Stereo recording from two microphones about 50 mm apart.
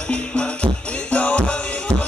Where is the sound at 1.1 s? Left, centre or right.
Left.